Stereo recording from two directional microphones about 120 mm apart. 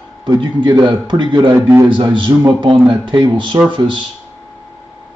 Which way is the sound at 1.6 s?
20° right (ahead or behind).